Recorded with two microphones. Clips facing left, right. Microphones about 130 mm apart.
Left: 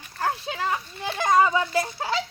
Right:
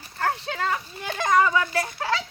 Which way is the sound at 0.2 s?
20° left (ahead or behind).